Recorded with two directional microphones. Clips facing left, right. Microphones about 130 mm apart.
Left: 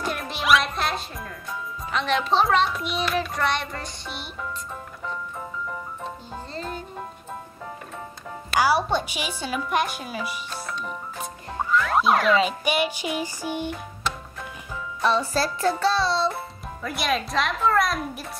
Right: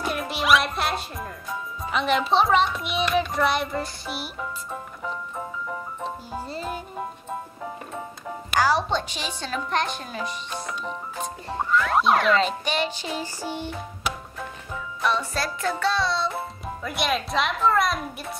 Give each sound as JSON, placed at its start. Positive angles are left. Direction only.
{"t": 0.0, "sound": "music", "side_deg": 0}
{"t": 6.3, "sound": "music", "side_deg": -10}
{"t": 8.5, "sound": "music", "side_deg": 10}
{"t": 9.4, "sound": "speech", "side_deg": 10}
{"t": 11.5, "sound": "speech", "side_deg": 0}
{"t": 14.0, "sound": "music", "side_deg": -10}
{"t": 15.0, "sound": "music", "side_deg": 30}
{"t": 16.6, "sound": "speech", "side_deg": 0}